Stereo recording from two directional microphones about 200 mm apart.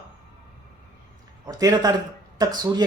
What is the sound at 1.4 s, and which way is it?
A woman's voice, 20° right (ahead or behind).